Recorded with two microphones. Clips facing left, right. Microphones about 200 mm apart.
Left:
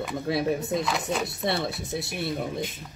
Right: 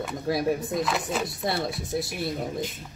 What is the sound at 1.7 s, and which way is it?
Speech, 25° left (ahead or behind).